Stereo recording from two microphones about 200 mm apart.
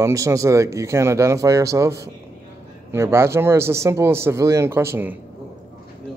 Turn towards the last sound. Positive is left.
turn(degrees=-10)  # may be behind; listen again after turning